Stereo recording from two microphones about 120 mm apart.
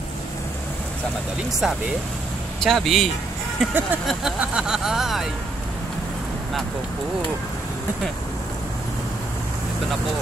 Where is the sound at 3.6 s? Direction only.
10° right (ahead or behind).